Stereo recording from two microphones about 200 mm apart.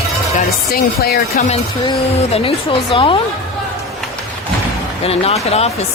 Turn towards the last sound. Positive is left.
turn(degrees=30)  # may be behind; listen again after turning